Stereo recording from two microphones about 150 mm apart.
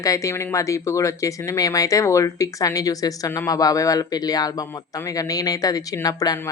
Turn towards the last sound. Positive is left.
turn(degrees=25)  # may be behind; listen again after turning